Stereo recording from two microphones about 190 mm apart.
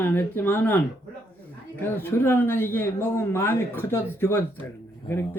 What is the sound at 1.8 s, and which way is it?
Speech, 10° left (ahead or behind).